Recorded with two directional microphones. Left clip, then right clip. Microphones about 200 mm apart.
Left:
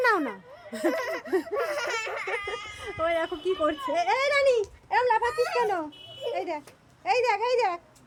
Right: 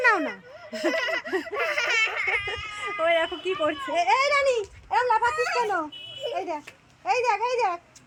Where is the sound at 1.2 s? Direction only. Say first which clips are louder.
Left 1 dB; 15° left (ahead or behind).